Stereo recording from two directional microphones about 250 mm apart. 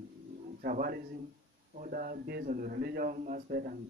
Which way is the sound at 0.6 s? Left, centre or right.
Right.